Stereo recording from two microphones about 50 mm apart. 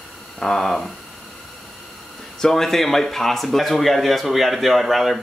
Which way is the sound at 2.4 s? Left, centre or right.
Centre.